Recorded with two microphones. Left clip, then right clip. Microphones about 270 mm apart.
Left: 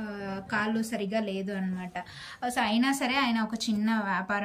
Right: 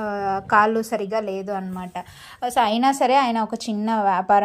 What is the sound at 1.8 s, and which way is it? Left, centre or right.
A woman's voice, centre.